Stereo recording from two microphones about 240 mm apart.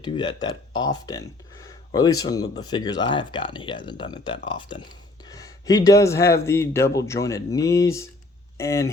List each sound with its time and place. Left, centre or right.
0.0 s a man's voice: centre
1.6 s a sound: centre
2.1 s a man's voice: centre